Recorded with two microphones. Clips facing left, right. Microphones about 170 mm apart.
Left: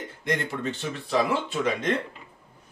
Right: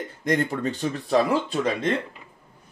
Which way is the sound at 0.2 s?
40° right (ahead or behind).